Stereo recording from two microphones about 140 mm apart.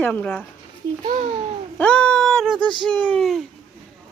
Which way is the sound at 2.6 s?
35° right (ahead or behind).